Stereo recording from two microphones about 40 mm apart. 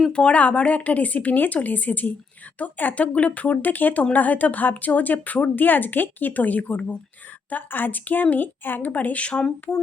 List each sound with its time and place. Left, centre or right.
0.1 s a woman's voice: left
2.9 s a woman's voice: left
7.5 s a woman's voice: left
9.4 s speech: centre